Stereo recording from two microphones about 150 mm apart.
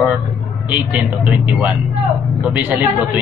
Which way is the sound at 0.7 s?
10° right (ahead or behind).